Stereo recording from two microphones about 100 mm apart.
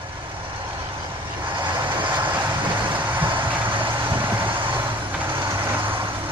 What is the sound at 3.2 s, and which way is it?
Vehicle, 55° right (ahead or behind).